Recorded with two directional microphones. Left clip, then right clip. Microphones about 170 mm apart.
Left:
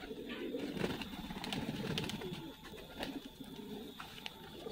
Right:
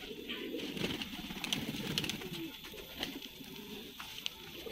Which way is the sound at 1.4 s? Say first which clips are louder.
Right 6 dB; 65° left (ahead or behind).